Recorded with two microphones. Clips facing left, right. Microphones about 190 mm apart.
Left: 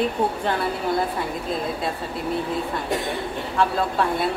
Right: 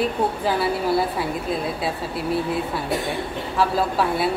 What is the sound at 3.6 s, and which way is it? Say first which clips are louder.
Speech: right 1 dB; 5° right (ahead or behind).